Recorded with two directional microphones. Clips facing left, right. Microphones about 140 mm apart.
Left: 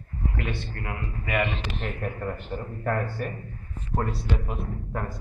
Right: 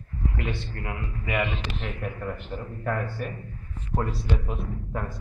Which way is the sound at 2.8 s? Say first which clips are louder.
Left 1 dB; 40° left (ahead or behind).